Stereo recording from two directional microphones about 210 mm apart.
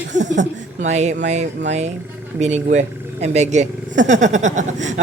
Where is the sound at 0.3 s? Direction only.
35° right (ahead or behind).